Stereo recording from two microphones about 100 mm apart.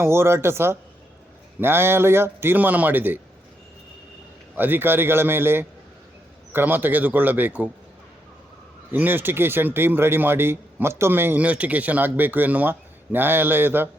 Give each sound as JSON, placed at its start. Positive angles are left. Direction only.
{"t": 0.0, "sound": "speech", "side_deg": -25}
{"t": 4.5, "sound": "speech", "side_deg": -20}
{"t": 8.9, "sound": "speech", "side_deg": -20}